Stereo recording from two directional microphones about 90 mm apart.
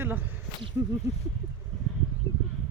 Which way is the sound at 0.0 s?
20° right (ahead or behind).